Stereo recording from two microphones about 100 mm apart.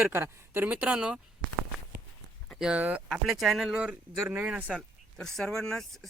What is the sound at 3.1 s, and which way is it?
Speech, 5° right (ahead or behind).